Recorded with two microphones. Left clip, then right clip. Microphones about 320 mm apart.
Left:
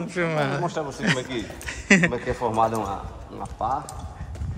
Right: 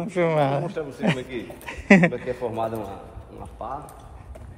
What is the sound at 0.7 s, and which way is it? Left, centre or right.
Speech, left.